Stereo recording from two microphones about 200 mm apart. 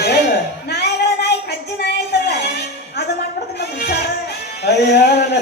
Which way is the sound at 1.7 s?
55° left (ahead or behind).